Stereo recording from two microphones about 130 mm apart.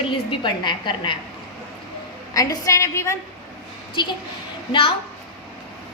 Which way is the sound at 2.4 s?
25° left (ahead or behind).